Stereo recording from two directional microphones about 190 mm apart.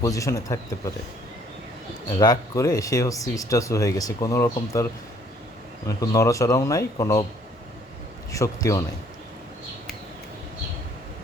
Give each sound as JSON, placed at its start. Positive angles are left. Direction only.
{"t": 0.0, "sound": "speech", "side_deg": 15}
{"t": 2.1, "sound": "speech", "side_deg": 20}
{"t": 6.0, "sound": "speech", "side_deg": 15}
{"t": 8.3, "sound": "speech", "side_deg": 15}